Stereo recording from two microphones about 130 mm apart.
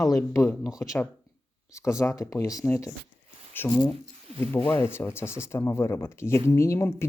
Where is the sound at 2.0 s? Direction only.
25° left (ahead or behind).